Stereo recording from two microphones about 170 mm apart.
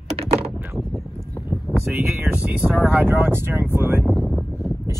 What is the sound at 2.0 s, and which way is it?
Speech, 10° right (ahead or behind).